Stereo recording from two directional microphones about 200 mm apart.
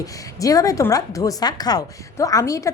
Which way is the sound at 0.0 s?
15° left (ahead or behind).